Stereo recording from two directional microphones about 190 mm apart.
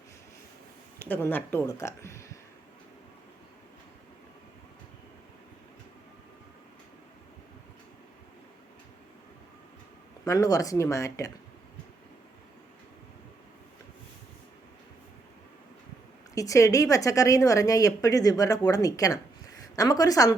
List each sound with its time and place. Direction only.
0.9 s speech: 10° left (ahead or behind)
10.2 s a woman's voice: 20° left (ahead or behind)
16.3 s a woman's voice: 15° left (ahead or behind)